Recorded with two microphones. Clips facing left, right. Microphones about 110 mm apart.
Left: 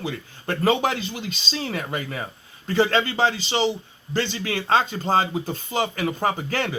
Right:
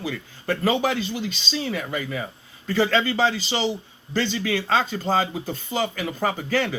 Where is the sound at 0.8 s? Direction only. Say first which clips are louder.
Right 1 dB; 45° left (ahead or behind).